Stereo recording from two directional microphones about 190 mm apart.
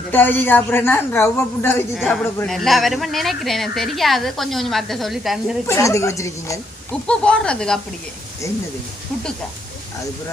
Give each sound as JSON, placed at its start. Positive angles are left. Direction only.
{"t": 0.1, "sound": "a woman's voice", "side_deg": 10}
{"t": 5.6, "sound": "a woman's voice", "side_deg": 15}
{"t": 6.9, "sound": "speech", "side_deg": 5}